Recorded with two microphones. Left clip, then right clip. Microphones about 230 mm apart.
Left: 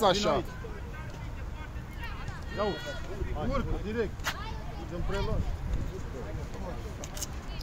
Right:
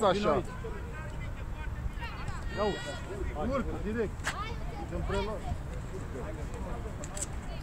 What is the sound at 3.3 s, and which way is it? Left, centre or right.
Speech, left.